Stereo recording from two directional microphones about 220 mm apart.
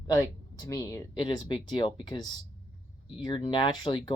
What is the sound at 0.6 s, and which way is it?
Speech, 15° left (ahead or behind).